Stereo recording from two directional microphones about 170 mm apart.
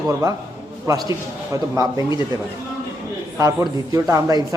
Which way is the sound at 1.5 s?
20° right (ahead or behind).